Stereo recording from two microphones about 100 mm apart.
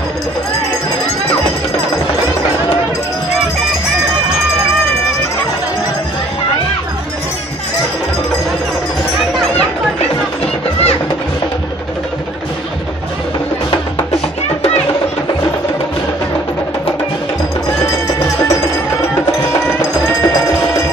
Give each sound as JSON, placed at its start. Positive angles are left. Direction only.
{"t": 10.4, "sound": "music", "side_deg": 90}